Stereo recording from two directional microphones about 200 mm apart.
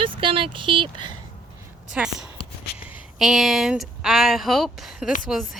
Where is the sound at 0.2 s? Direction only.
25° right (ahead or behind).